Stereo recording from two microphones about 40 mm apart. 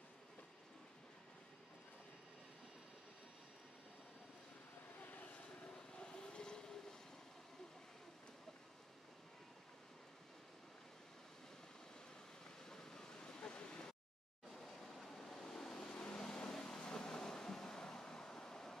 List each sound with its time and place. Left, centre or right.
5.0 s vehicle: left
5.9 s vehicle: left
12.6 s a sound: centre
14.5 s vehicle: centre